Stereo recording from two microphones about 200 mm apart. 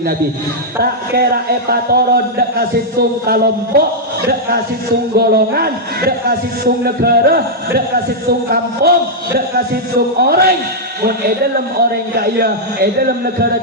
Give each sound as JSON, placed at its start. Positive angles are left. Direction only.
{"t": 0.8, "sound": "a man's voice", "side_deg": -50}
{"t": 10.2, "sound": "a man's voice", "side_deg": -50}
{"t": 12.1, "sound": "a man's voice", "side_deg": -50}